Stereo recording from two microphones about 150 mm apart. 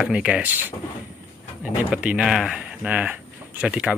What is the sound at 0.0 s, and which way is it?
Speech, 5° right (ahead or behind).